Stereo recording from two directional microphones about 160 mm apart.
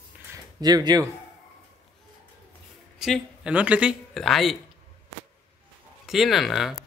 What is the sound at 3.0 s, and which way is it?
Speech, 5° right (ahead or behind).